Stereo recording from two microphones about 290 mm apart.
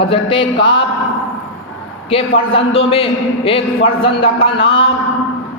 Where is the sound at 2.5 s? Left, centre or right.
Centre.